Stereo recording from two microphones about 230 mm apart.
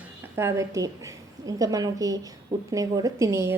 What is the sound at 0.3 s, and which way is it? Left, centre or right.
A woman's voice, centre.